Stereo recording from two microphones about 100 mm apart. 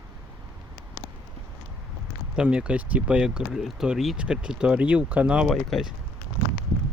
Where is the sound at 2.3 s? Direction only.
10° right (ahead or behind).